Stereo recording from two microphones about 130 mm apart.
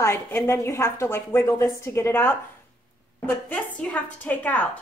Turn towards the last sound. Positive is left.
turn(degrees=10)  # may be behind; listen again after turning